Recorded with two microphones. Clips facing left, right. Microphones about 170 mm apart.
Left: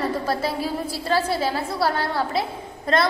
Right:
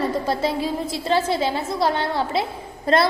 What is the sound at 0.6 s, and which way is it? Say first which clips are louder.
Speech: right 2 dB; 10° left (ahead or behind).